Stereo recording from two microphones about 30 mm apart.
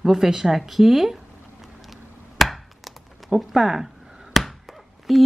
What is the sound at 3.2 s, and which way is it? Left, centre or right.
Speech, right.